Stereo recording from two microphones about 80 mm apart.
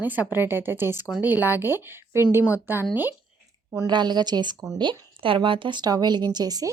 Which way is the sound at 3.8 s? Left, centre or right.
Right.